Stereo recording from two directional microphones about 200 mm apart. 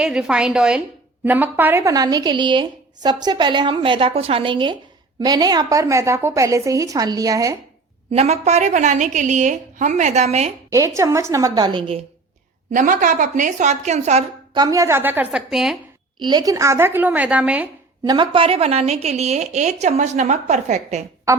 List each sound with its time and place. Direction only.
0.0 s a woman's voice: 5° right (ahead or behind)
8.1 s a woman's voice: 35° right (ahead or behind)
10.7 s a woman's voice: 15° right (ahead or behind)
12.7 s a woman's voice: 40° right (ahead or behind)
14.5 s a woman's voice: 20° right (ahead or behind); by 15.8 s centre (ahead or behind)
16.2 s a woman's voice: 20° right (ahead or behind)
18.0 s a woman's voice: 20° right (ahead or behind)